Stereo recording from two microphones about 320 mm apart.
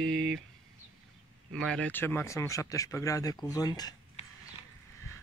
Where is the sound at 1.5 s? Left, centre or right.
Centre.